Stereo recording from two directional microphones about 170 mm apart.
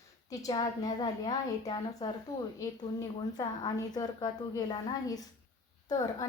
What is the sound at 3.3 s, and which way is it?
A woman's voice, 25° left (ahead or behind).